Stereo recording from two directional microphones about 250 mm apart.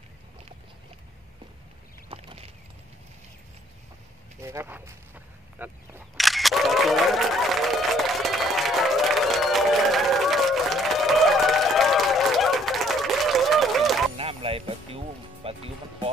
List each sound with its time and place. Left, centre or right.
2.0 s a sound: right
4.4 s speech: centre
5.6 s single-lens reflex camera: centre
14.1 s music: right